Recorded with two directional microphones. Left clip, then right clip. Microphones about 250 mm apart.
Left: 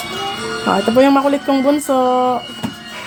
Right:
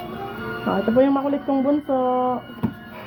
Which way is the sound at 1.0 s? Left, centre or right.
Left.